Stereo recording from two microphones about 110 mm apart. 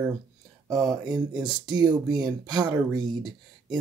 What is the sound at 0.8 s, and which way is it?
Speech, 40° right (ahead or behind).